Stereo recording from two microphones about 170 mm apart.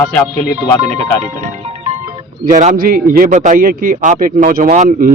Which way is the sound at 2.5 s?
45° right (ahead or behind).